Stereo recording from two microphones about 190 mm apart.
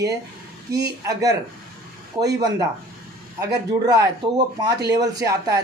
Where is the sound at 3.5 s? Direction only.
20° right (ahead or behind).